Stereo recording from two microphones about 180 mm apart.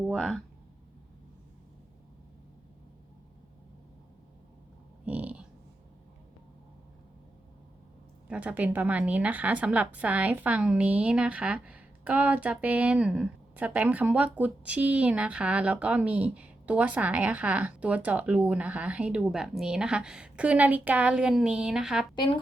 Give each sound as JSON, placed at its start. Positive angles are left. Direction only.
{"t": 0.1, "sound": "speech", "side_deg": 0}
{"t": 5.0, "sound": "a sound", "side_deg": -10}
{"t": 8.3, "sound": "a woman's voice", "side_deg": -10}
{"t": 22.1, "sound": "speech", "side_deg": 25}